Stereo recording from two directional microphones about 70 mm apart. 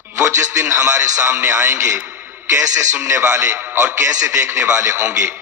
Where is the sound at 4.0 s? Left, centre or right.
Right.